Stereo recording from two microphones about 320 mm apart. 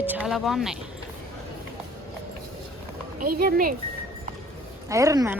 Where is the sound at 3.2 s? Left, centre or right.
Right.